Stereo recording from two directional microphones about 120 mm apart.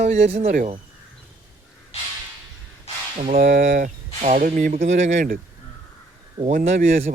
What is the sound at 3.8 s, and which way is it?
Speech, 80° right.